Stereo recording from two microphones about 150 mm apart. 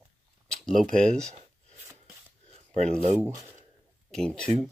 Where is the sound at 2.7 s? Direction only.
50° right (ahead or behind).